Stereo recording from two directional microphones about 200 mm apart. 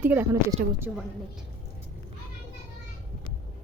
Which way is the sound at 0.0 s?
10° right (ahead or behind).